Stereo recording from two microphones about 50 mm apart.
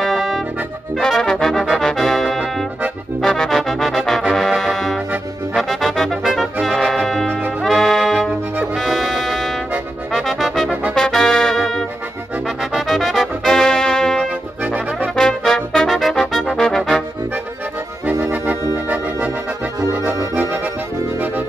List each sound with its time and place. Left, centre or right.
0.0 s accordion: centre
0.9 s brass instrument: centre
3.2 s music: centre
10.1 s brass instrument: centre
12.7 s music: centre
14.6 s brass instrument: right
15.1 s brass instrument: centre
16.5 s music: centre
18.9 s music: right